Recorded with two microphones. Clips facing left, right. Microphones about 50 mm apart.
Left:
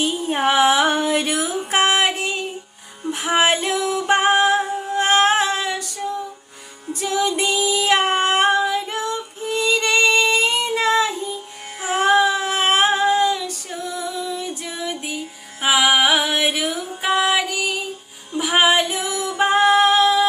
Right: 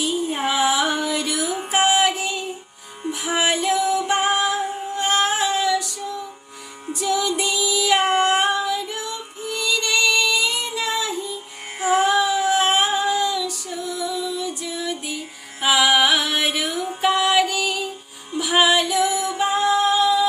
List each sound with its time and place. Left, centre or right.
0.0 s music: left
3.1 s female singing: left
7.0 s music: left
11.9 s child singing: left
13.9 s music: left
14.8 s music: left
18.3 s music: left
19.0 s music: right
19.4 s music: left
19.6 s music: left